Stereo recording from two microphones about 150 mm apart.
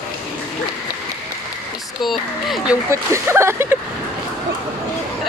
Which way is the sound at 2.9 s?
20° right (ahead or behind).